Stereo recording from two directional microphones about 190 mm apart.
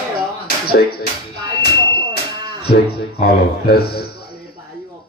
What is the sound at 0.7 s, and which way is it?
Speech, 55° left (ahead or behind).